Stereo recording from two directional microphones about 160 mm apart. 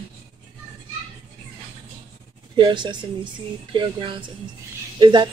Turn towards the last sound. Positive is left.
turn(degrees=-30)  # may be behind; listen again after turning